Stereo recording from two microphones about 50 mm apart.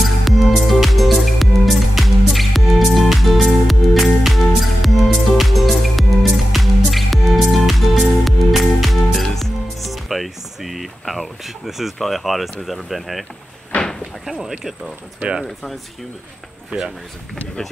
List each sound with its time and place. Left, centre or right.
0.0 s music: centre
14.4 s speech: centre
16.7 s speech: right